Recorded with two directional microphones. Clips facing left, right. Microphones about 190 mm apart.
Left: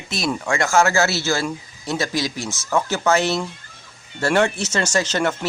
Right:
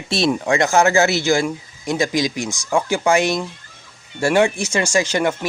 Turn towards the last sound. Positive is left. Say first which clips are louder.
# right 2 dB
turn(degrees=-10)  # may be behind; listen again after turning